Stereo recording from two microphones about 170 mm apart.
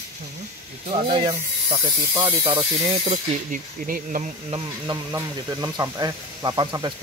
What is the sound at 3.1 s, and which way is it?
Speech, 50° right (ahead or behind).